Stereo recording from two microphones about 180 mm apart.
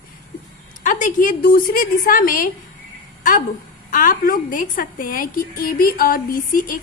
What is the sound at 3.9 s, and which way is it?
A woman's voice, 50° left (ahead or behind).